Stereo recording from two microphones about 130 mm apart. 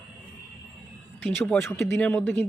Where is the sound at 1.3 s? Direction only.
5° left (ahead or behind).